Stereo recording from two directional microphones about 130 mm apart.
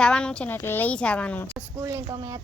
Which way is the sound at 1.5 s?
20° right (ahead or behind).